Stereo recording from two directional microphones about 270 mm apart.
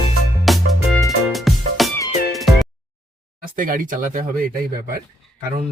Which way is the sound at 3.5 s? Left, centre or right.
Right.